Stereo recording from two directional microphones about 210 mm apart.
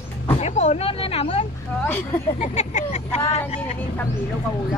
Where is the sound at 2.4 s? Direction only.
35° left (ahead or behind).